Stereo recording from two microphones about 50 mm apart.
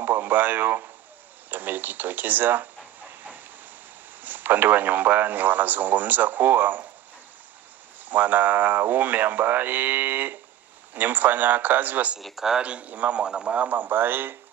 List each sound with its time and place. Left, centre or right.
0.0 s a man's voice: right
4.2 s a man's voice: right
8.0 s a man's voice: right
12.2 s speech: centre
12.6 s a man's voice: right
13.2 s a man's voice: centre
13.7 s speech: right